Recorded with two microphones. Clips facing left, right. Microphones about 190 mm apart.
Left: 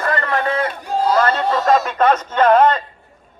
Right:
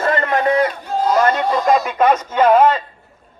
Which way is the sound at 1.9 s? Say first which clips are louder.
Right 1 dB; 10° right (ahead or behind).